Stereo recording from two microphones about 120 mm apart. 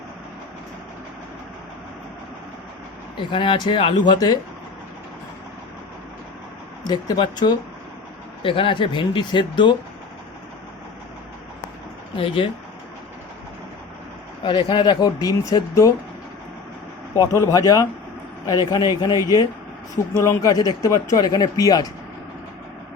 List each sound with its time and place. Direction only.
3.2 s speech: 45° left (ahead or behind)
6.8 s speech: 35° left (ahead or behind)
8.4 s speech: 50° left (ahead or behind)
12.1 s speech: 45° left (ahead or behind)
14.4 s speech: 40° left (ahead or behind)
17.2 s speech: 25° left (ahead or behind)